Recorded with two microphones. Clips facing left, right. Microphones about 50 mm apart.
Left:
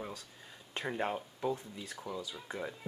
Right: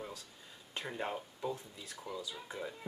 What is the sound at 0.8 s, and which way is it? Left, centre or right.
Speech, centre.